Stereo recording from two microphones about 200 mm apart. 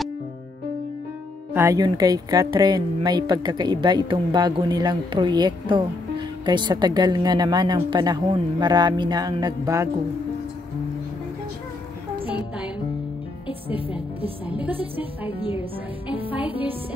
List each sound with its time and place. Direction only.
1.5 s speech: 15° right (ahead or behind)
13.7 s speech: 25° left (ahead or behind)